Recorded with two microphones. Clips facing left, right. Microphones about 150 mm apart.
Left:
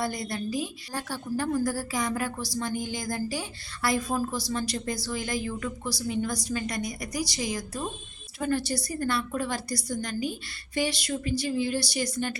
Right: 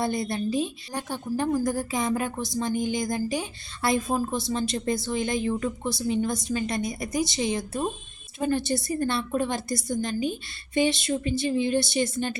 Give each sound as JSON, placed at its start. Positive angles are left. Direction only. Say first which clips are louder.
{"t": 0.0, "sound": "a woman's voice", "louder": "right 4 dB", "side_deg": -25}